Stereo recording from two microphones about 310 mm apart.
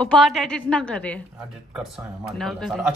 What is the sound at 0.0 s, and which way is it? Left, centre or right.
Speech, centre.